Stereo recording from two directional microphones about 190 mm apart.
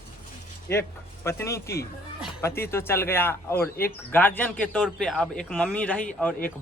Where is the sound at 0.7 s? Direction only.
15° left (ahead or behind).